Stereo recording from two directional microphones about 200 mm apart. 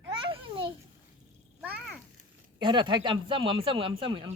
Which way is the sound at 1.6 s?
5° right (ahead or behind).